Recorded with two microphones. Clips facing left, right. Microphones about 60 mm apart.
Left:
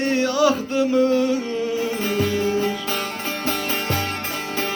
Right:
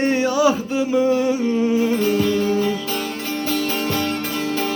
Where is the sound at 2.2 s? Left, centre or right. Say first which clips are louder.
Right 2 dB; left.